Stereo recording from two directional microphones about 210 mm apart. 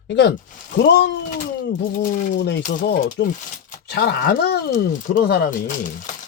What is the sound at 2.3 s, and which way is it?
Speech, 55° left (ahead or behind).